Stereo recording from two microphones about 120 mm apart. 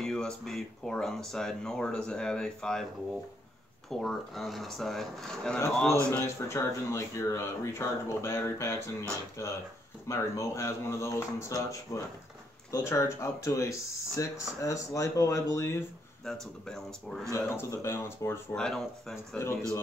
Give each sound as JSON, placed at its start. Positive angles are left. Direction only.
{"t": 0.0, "sound": "speech", "side_deg": 5}
{"t": 3.9, "sound": "speech", "side_deg": 5}
{"t": 6.0, "sound": "speech", "side_deg": 20}
{"t": 16.3, "sound": "speech", "side_deg": 5}
{"t": 17.3, "sound": "speech", "side_deg": 25}
{"t": 18.5, "sound": "speech", "side_deg": 5}
{"t": 19.4, "sound": "speech", "side_deg": 20}